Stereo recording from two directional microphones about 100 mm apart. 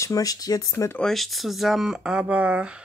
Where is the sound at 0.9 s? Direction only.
5° left (ahead or behind); by 2.8 s 15° right (ahead or behind).